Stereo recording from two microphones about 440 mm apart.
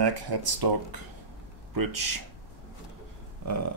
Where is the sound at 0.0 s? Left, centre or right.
Right.